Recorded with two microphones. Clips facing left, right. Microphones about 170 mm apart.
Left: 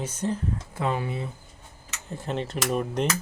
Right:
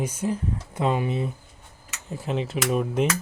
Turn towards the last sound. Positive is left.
turn(degrees=-5)  # may be behind; listen again after turning